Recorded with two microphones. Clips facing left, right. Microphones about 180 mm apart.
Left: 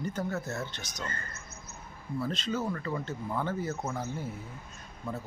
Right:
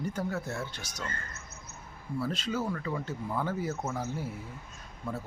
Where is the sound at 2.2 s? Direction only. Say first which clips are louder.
Even; 10° right (ahead or behind).